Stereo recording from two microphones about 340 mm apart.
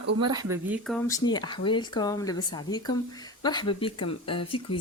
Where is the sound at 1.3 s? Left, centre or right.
Centre.